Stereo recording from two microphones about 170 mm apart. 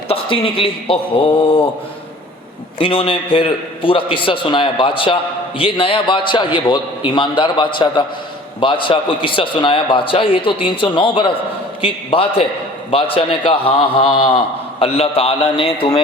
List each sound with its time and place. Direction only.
0.1 s a man's voice: 30° left (ahead or behind)
2.7 s a man's voice: 30° left (ahead or behind)